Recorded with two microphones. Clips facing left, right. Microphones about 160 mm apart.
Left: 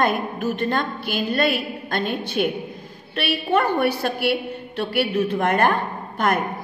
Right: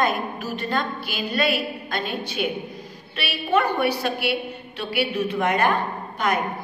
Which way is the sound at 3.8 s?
55° left (ahead or behind).